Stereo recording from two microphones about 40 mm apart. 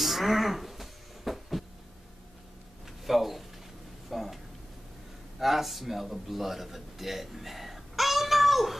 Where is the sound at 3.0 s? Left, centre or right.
Centre.